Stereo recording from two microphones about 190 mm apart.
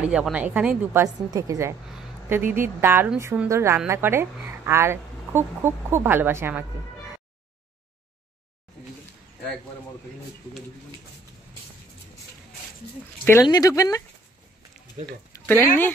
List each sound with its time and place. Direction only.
0.0 s a woman's voice: 5° right (ahead or behind)
13.2 s speech: 15° left (ahead or behind)
15.0 s speech: 35° right (ahead or behind)
15.3 s speech: 10° left (ahead or behind)